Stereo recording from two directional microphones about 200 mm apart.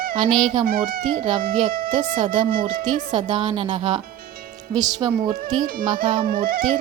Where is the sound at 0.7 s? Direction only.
45° right (ahead or behind).